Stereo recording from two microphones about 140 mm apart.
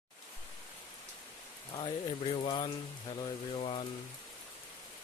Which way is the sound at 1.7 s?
35° left (ahead or behind).